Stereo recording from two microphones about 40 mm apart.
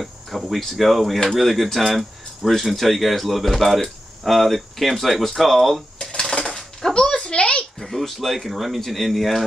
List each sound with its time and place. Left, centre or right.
0.0 s speech: centre
5.9 s dishes: centre
6.9 s a sound: left
7.8 s speech: centre